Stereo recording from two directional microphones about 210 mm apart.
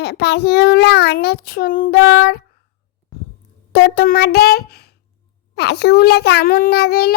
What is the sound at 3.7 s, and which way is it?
A child's voice, 50° left (ahead or behind).